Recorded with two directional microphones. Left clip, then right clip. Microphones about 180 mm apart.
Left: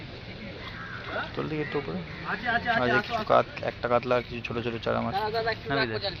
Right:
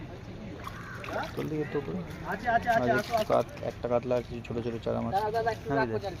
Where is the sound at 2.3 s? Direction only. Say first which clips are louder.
Even; 35° right (ahead or behind).